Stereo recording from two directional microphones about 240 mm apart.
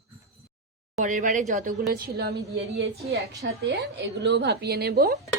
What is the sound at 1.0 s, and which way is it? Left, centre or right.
A woman's voice, right.